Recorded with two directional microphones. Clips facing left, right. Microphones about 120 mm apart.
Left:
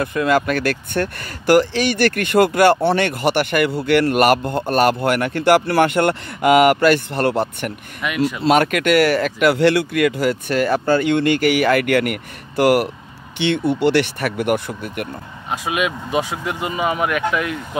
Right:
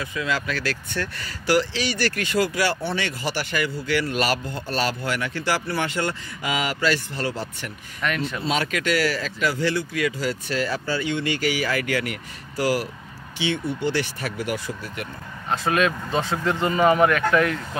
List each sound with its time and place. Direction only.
0.0 s speech: 55° left (ahead or behind)
8.0 s speech: 10° left (ahead or behind)
8.4 s speech: 60° left (ahead or behind)
15.5 s speech: 10° left (ahead or behind)